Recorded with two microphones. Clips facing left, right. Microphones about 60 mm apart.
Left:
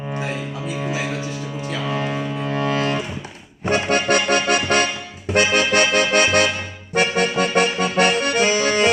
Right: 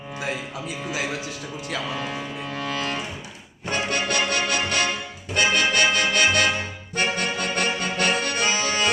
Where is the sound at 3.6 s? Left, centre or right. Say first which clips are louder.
Left 6 dB; left.